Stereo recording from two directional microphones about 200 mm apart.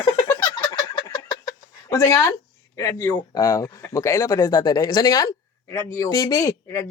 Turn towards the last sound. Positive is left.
turn(degrees=15)  # may be behind; listen again after turning